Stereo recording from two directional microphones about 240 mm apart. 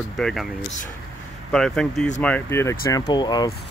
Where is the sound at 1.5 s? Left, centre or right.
Centre.